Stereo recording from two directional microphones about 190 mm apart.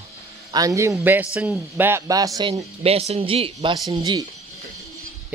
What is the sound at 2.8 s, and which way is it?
Speech, 30° right (ahead or behind).